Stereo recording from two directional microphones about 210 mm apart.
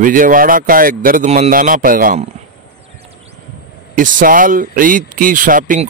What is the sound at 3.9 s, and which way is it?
Speech, 40° right (ahead or behind).